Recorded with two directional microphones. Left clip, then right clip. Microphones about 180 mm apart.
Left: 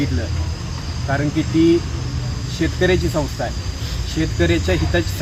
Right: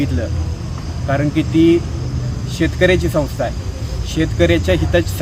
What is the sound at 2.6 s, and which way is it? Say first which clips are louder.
Speech: right 4 dB; 25° right (ahead or behind).